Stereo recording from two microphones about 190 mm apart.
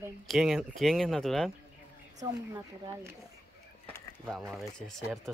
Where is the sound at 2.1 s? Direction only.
20° right (ahead or behind).